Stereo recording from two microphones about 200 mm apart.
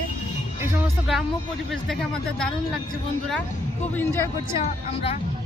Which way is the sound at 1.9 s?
Centre (ahead or behind).